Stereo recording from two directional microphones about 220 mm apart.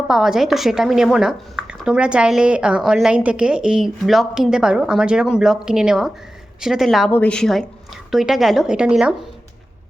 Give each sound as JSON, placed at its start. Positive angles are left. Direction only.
{"t": 0.1, "sound": "a woman's voice", "side_deg": 0}